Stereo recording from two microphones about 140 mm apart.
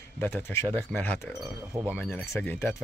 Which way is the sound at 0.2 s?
15° left (ahead or behind).